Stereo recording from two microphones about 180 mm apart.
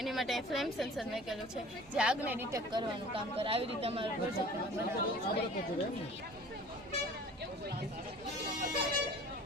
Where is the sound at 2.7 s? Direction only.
30° right (ahead or behind).